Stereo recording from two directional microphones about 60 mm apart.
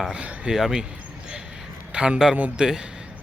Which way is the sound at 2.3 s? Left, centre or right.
Right.